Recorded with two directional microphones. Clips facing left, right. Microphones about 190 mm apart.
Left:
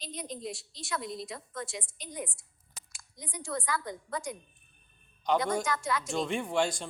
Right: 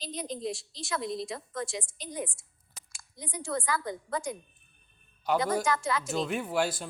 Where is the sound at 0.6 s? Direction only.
90° right.